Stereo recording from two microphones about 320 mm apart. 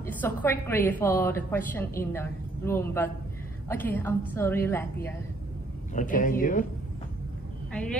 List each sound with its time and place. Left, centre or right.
0.0 s a woman's voice: centre
5.9 s speech: left
7.7 s speech: centre